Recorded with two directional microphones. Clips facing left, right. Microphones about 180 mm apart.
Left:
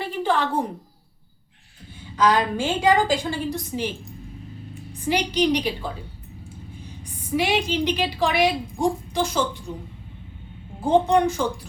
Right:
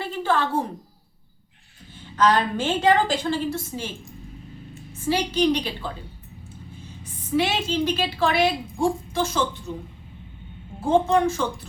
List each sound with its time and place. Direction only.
0.0 s a sound: 15° left (ahead or behind)
2.1 s a woman's voice: 10° left (ahead or behind)
4.9 s a woman's voice: 15° left (ahead or behind)
7.0 s a woman's voice: 10° left (ahead or behind)
10.8 s a woman's voice: 15° left (ahead or behind)